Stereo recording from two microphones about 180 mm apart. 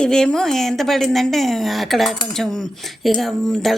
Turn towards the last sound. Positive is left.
turn(degrees=0)  # may be behind; listen again after turning